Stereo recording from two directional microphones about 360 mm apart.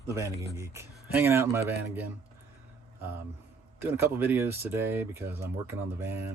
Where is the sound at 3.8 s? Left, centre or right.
Centre.